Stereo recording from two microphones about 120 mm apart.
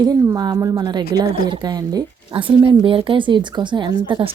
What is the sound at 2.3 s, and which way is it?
A woman's voice, 45° right (ahead or behind).